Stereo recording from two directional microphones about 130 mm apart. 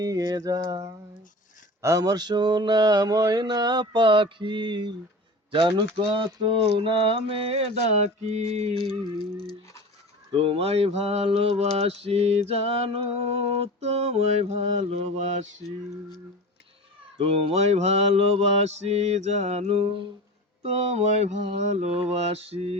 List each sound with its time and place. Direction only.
0.0 s a sound: 30° right (ahead or behind)
1.8 s mantra: 25° right (ahead or behind); by 9.0 s 45° right (ahead or behind)
10.3 s mantra: 50° right (ahead or behind)
17.2 s mantra: 50° right (ahead or behind)